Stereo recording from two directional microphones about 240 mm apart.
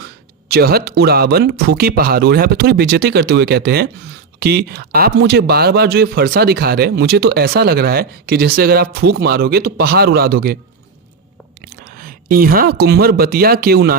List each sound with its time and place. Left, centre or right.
0.0 s speech: right
11.6 s speech: right